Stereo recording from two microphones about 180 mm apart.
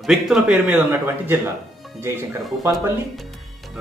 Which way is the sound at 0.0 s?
Centre (ahead or behind).